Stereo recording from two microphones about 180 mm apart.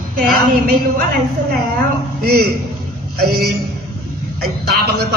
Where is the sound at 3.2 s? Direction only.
60° right (ahead or behind).